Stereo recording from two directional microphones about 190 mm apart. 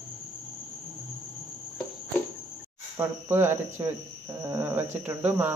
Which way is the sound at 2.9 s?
10° right (ahead or behind).